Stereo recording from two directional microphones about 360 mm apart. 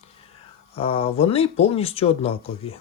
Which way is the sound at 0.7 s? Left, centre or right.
Centre.